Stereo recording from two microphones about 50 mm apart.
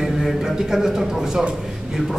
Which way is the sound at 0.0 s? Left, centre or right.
Centre.